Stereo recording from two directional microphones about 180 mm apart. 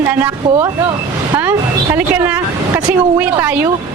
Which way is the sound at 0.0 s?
15° right (ahead or behind).